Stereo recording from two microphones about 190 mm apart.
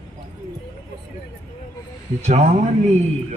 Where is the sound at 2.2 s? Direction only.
35° right (ahead or behind).